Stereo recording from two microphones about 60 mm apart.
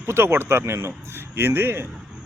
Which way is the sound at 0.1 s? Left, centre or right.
Right.